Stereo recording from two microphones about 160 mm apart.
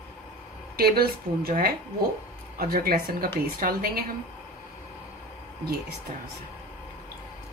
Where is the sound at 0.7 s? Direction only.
70° right (ahead or behind).